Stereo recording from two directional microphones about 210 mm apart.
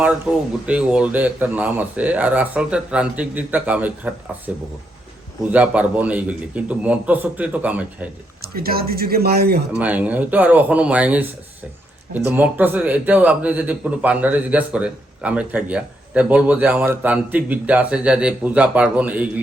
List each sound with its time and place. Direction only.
0.6 s speech: 5° right (ahead or behind)
8.4 s speech: 45° right (ahead or behind)
9.7 s speech: 5° right (ahead or behind)